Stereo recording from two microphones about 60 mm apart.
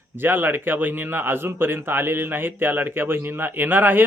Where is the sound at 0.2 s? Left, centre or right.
Right.